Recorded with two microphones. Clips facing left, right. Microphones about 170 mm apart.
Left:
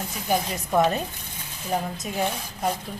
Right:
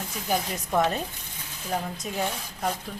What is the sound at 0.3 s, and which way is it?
Speech, 5° left (ahead or behind).